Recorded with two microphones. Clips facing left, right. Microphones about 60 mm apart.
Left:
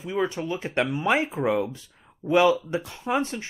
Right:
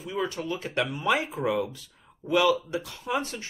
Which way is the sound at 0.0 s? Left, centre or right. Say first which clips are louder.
Left 4 dB; left.